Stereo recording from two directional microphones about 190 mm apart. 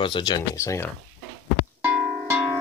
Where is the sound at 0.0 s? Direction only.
25° left (ahead or behind).